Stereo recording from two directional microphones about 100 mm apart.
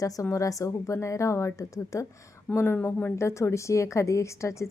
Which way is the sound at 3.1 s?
30° left (ahead or behind).